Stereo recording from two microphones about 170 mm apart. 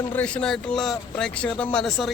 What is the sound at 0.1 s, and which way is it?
Speech, 5° left (ahead or behind).